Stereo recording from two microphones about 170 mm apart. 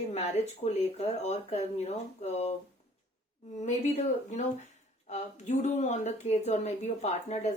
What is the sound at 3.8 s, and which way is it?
Speech, 45° left (ahead or behind).